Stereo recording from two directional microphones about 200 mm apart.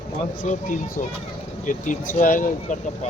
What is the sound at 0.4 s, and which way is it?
Speech, 35° left (ahead or behind).